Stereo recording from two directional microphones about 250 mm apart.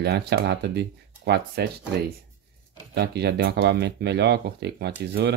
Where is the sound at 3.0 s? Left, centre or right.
Right.